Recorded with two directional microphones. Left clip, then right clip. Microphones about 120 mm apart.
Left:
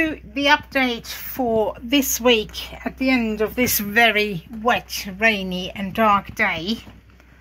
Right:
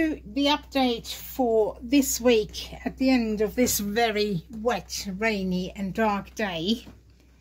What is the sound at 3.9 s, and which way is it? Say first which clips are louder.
Speech: left 9 dB; centre (ahead or behind).